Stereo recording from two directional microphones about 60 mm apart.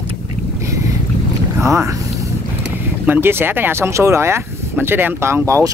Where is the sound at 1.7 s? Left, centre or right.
Right.